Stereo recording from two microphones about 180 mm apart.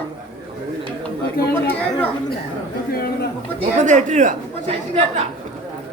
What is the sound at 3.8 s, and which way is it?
Speech, 45° right (ahead or behind).